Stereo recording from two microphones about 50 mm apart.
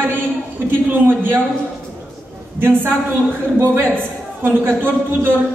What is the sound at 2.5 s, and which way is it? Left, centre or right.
A woman's voice, right.